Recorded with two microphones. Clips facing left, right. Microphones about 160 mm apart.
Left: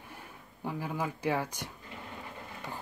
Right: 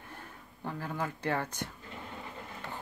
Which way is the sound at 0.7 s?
10° left (ahead or behind).